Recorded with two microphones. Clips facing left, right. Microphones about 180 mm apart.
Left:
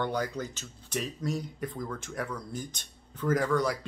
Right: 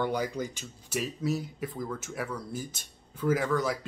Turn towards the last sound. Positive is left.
turn(degrees=0)  # may be behind; listen again after turning